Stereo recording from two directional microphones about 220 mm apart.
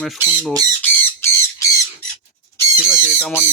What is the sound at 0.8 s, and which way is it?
Squawk, 10° left (ahead or behind).